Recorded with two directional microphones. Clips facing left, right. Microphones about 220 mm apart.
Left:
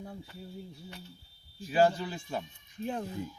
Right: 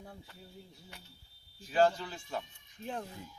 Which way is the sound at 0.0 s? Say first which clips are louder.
Left 7 dB; 5° left (ahead or behind).